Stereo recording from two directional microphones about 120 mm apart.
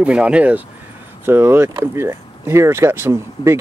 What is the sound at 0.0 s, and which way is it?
Speech, 10° right (ahead or behind).